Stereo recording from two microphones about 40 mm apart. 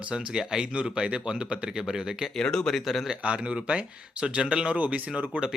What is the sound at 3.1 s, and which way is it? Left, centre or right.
Speech, right.